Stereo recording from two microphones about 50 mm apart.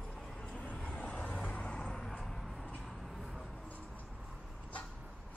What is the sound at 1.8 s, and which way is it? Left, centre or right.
Vehicle, centre.